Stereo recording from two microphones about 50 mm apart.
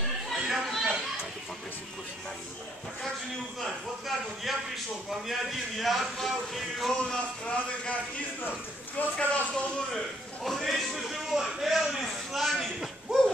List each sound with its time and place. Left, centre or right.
0.3 s a sound: centre
4.5 s music: centre
7.2 s speech: left
9.1 s speech: left
10.4 s a man's voice: centre